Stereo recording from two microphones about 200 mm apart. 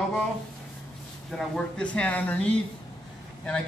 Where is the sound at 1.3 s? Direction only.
Centre (ahead or behind).